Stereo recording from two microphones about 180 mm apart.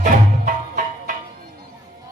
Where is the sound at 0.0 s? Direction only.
50° right (ahead or behind).